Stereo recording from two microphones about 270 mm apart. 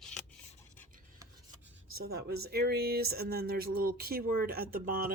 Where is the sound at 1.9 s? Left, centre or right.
Right.